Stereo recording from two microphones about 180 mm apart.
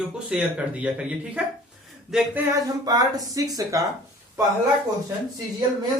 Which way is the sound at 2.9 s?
20° right (ahead or behind).